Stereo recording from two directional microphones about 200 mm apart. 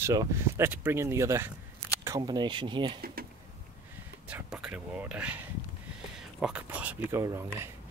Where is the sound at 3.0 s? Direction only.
50° right (ahead or behind).